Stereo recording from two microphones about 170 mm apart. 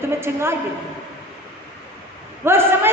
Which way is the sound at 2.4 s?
15° right (ahead or behind).